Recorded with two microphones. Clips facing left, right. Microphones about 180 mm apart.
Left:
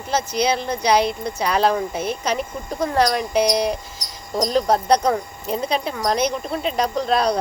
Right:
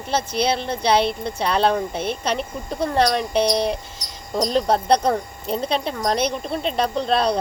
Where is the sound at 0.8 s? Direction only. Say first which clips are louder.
Even; 25° right (ahead or behind).